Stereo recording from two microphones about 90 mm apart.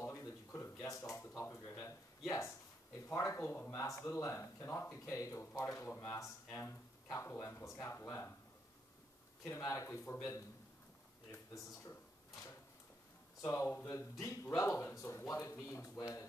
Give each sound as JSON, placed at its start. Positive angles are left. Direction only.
{"t": 0.0, "sound": "a sound", "side_deg": 30}
{"t": 3.1, "sound": "speech", "side_deg": 35}
{"t": 9.6, "sound": "speech", "side_deg": 35}
{"t": 13.4, "sound": "speech", "side_deg": 35}